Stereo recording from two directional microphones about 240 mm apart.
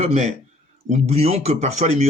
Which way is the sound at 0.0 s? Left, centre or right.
Right.